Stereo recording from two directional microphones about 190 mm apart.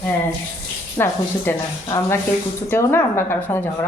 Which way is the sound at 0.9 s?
10° left (ahead or behind).